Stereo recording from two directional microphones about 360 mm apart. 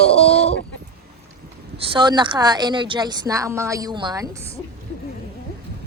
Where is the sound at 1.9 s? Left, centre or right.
Centre.